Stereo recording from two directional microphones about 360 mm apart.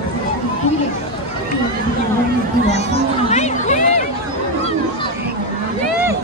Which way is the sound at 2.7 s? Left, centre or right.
Centre.